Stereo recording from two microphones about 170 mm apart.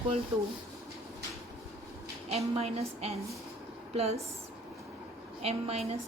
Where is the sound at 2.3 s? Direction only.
35° right (ahead or behind).